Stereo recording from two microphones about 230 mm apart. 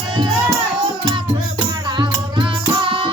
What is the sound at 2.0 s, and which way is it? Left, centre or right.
Music, centre.